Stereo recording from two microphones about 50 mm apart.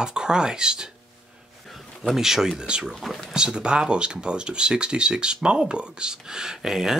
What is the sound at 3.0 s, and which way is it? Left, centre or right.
Speech, centre.